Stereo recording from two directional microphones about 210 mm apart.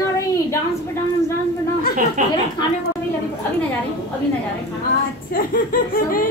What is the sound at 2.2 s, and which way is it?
Speech, 40° right (ahead or behind).